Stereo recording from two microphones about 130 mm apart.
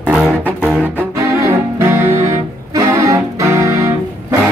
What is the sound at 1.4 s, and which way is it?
Music, 20° right (ahead or behind).